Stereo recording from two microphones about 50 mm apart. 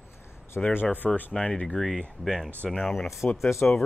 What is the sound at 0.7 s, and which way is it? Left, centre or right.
Speech, left.